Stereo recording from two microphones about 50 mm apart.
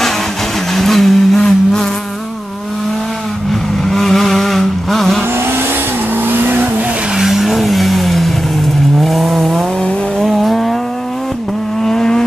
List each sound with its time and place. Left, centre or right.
0.7 s vehicle: centre
1.4 s a sound: centre
3.9 s vehicle: centre
6.2 s vehicle: right
7.2 s vehicle: centre
11.8 s vehicle: centre